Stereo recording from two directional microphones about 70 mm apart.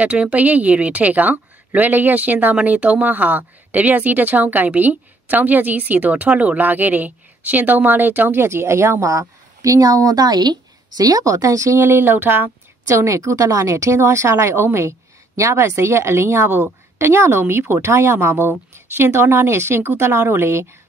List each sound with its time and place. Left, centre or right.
0.0 s speech: centre
12.8 s a woman's voice: right